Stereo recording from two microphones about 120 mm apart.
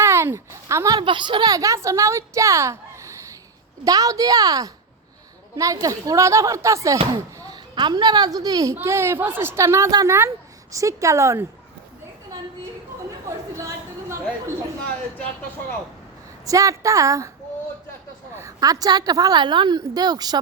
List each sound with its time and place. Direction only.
0.0 s a sound: 25° right (ahead or behind)
0.9 s a woman's voice: 45° right (ahead or behind); by 7.0 s 25° right (ahead or behind)
7.1 s a woman's voice: 35° right (ahead or behind)
13.2 s chatter: 25° right (ahead or behind)
16.5 s speech: 30° right (ahead or behind)
18.3 s a woman's voice: 30° right (ahead or behind)